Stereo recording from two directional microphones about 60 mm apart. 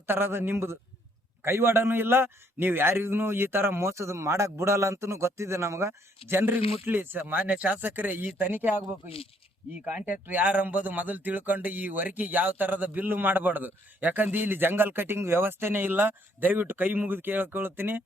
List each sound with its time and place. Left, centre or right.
0.1 s speech: right
9.8 s speech: right